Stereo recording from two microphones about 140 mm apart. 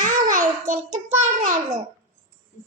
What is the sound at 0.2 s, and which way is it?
Child singing, 65° right (ahead or behind).